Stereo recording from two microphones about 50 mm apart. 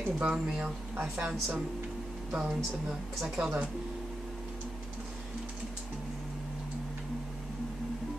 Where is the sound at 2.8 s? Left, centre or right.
Centre.